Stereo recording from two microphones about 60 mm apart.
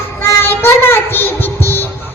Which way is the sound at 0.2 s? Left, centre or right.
Left.